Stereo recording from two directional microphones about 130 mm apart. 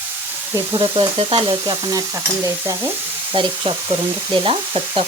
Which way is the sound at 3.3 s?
40° right (ahead or behind).